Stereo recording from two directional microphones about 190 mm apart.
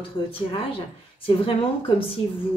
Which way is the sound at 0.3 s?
30° left (ahead or behind).